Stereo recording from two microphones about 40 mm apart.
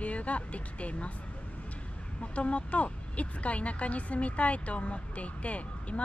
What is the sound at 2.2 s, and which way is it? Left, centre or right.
Speech, left.